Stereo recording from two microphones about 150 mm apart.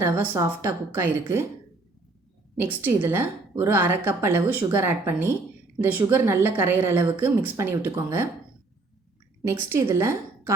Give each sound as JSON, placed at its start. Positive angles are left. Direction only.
{"t": 0.0, "sound": "a woman's voice", "side_deg": -20}
{"t": 2.6, "sound": "a woman's voice", "side_deg": -15}
{"t": 9.4, "sound": "a woman's voice", "side_deg": -20}